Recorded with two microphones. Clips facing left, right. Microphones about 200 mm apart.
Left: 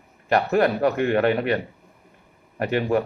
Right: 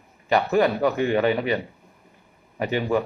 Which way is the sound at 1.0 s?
Centre (ahead or behind).